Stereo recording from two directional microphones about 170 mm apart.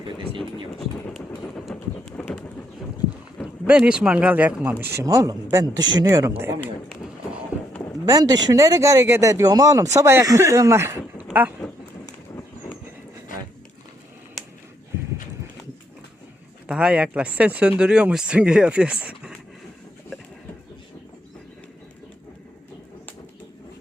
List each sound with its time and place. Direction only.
0.8 s a sound: centre (ahead or behind)
1.4 s clip-clop: 5° left (ahead or behind)
3.7 s speech: 5° right (ahead or behind)
7.5 s a sound: 10° right (ahead or behind)
8.0 s speech: 20° right (ahead or behind)
16.6 s speech: 5° right (ahead or behind)